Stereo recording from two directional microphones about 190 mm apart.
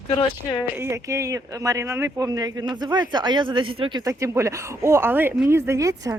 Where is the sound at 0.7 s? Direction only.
15° right (ahead or behind).